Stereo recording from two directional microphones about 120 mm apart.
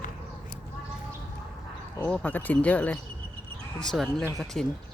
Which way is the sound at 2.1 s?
10° left (ahead or behind).